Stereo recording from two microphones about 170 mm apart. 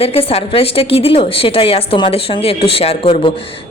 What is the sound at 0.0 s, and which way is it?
A woman's voice, 35° left (ahead or behind).